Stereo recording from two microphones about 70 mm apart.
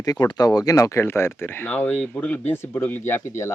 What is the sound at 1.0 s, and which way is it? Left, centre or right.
Speech, left.